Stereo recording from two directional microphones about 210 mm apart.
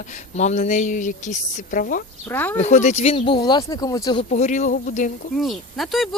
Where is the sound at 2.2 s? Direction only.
10° left (ahead or behind).